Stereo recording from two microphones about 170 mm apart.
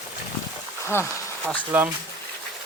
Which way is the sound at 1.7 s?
15° right (ahead or behind).